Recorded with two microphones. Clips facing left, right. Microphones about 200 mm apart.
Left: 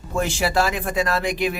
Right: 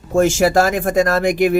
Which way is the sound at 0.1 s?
45° right (ahead or behind).